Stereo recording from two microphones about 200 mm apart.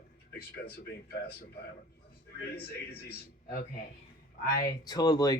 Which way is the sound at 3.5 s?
50° left (ahead or behind).